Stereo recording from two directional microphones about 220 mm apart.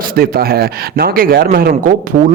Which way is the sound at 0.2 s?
45° right (ahead or behind).